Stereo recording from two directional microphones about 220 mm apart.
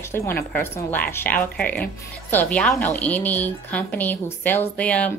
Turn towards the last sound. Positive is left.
turn(degrees=5)  # may be behind; listen again after turning